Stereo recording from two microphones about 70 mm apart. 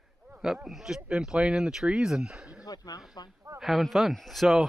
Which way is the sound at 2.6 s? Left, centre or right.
Left.